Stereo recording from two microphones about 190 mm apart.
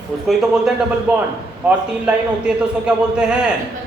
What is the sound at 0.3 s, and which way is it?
A man's voice, 5° right (ahead or behind).